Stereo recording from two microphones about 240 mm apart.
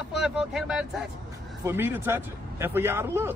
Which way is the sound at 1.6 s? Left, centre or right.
Centre.